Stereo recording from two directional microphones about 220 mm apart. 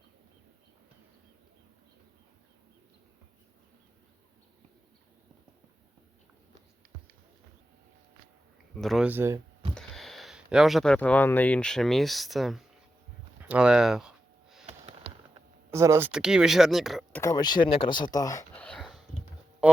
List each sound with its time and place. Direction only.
8.7 s speech: centre (ahead or behind)
9.7 s speech: centre (ahead or behind)
14.7 s sniff: 25° right (ahead or behind)
15.7 s speech: 15° right (ahead or behind)
17.2 s speech: 15° left (ahead or behind)
18.6 s a sound: centre (ahead or behind)